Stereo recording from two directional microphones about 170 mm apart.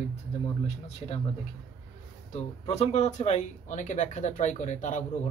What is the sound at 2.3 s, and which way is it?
Speech, 40° left (ahead or behind).